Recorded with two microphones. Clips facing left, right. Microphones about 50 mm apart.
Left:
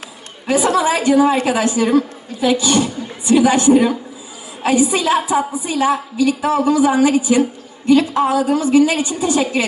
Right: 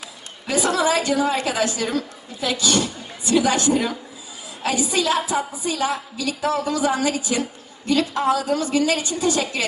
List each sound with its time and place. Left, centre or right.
0.4 s a woman's voice: left